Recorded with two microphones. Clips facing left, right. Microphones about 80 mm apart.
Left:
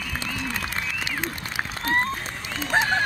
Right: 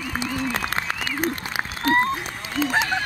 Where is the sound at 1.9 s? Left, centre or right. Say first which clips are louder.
Right 5 dB; right.